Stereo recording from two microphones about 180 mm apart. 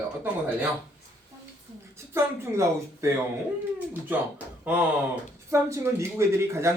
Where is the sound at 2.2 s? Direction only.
15° right (ahead or behind).